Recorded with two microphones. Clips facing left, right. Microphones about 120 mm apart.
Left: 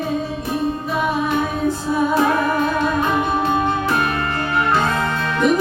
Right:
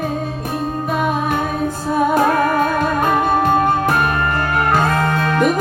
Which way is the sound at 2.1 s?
50° right (ahead or behind).